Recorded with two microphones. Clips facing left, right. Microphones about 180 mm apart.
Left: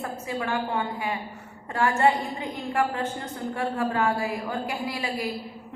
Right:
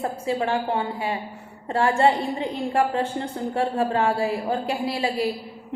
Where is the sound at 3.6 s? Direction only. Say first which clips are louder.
Right 4 dB; 30° right (ahead or behind).